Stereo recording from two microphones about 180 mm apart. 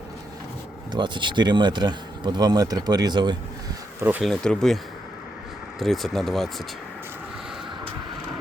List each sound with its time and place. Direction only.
0.9 s speech: 25° right (ahead or behind)
4.0 s speech: 10° right (ahead or behind)
4.3 s speech: centre (ahead or behind)
5.8 s speech: centre (ahead or behind)